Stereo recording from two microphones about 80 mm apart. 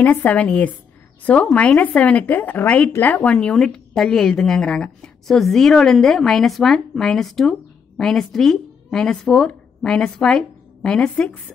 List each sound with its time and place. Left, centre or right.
0.0 s a woman's voice: left